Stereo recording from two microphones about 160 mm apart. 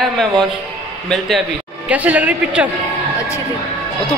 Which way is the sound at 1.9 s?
10° right (ahead or behind).